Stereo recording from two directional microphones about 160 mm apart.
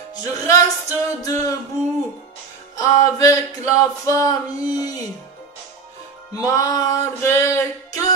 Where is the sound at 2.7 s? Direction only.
20° left (ahead or behind).